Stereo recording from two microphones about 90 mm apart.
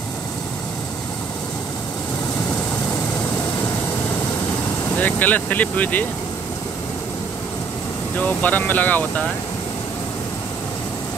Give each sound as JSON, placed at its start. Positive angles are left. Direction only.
{"t": 4.9, "sound": "speech", "side_deg": 20}
{"t": 8.2, "sound": "speech", "side_deg": 20}